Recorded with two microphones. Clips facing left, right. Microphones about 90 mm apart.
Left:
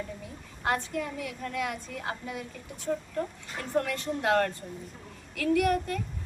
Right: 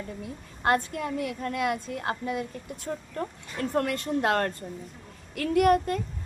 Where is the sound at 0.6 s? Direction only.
55° right (ahead or behind).